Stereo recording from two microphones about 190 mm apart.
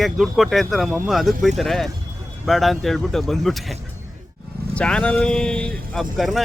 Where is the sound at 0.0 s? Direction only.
Centre (ahead or behind).